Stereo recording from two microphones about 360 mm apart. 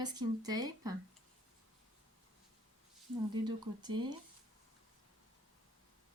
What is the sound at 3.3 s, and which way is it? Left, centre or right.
Speech, centre.